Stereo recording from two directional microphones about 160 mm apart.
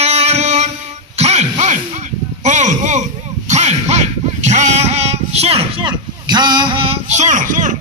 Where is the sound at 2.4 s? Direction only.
50° right (ahead or behind).